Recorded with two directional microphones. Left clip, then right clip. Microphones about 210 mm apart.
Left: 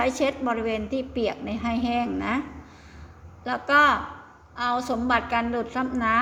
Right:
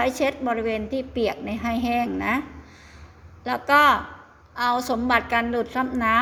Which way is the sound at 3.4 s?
15° right (ahead or behind).